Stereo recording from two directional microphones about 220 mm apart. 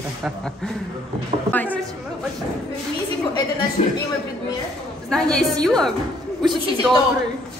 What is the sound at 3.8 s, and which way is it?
Speech, 30° left (ahead or behind).